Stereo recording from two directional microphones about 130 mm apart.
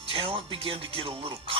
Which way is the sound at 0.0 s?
45° right (ahead or behind).